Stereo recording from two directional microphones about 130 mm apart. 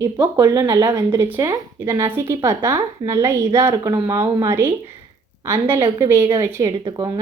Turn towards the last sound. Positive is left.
turn(degrees=-30)  # may be behind; listen again after turning